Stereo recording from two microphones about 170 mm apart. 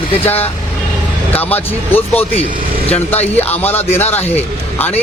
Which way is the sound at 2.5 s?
60° right (ahead or behind).